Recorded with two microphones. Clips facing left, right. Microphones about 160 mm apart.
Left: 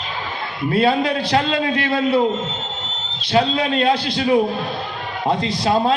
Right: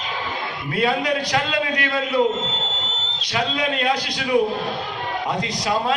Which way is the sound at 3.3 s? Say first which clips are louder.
Left 6 dB; 30° left (ahead or behind).